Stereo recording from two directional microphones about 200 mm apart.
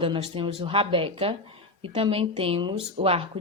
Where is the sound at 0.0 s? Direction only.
25° right (ahead or behind).